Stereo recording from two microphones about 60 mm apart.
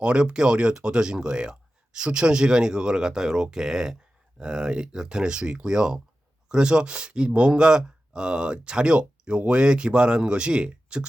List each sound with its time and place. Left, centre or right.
0.0 s speech: centre